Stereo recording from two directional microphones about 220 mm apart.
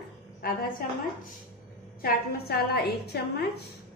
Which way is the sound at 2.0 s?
45° left (ahead or behind).